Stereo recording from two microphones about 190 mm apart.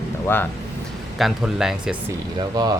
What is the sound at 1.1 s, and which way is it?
Speech, centre (ahead or behind).